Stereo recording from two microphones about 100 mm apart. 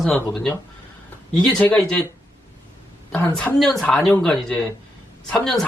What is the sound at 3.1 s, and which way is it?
Speech, 20° left (ahead or behind).